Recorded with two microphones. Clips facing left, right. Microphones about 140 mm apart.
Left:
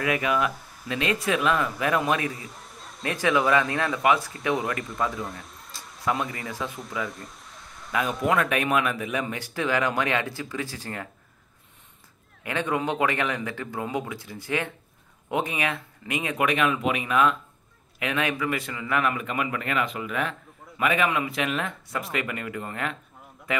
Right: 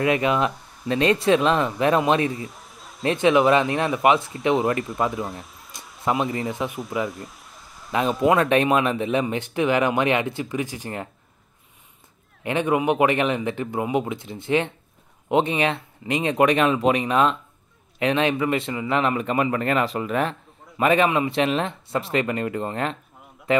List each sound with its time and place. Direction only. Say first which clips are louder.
0.0 s speech: right 4 dB; 25° right (ahead or behind)
2.3 s a sound: right 6 dB; centre (ahead or behind)
3.0 s speech: right 6 dB; 25° right (ahead or behind)
5.3 s speech: right 3 dB; centre (ahead or behind)
6.0 s speech: right 5 dB; 25° right (ahead or behind)
7.1 s a sound: right 4 dB; centre (ahead or behind)
7.9 s speech: right 5 dB; 25° right (ahead or behind)
12.4 s a man's voice: right 6 dB; 20° right (ahead or behind)